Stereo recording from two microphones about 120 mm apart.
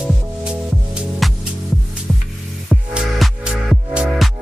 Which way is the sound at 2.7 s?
5° right (ahead or behind).